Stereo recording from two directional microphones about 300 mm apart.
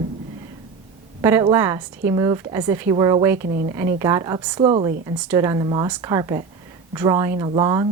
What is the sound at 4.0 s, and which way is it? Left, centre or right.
A woman's voice, centre.